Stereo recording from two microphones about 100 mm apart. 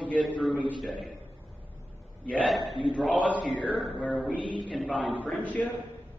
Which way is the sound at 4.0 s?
10° left (ahead or behind).